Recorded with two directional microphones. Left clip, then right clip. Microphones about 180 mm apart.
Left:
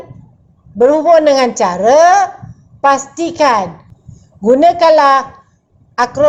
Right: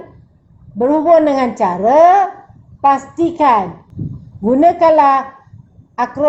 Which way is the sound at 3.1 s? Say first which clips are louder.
Even; 15° left (ahead or behind).